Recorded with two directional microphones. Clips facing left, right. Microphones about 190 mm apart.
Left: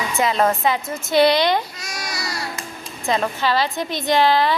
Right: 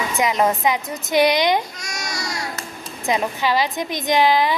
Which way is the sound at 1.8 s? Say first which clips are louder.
Even; 5° left (ahead or behind).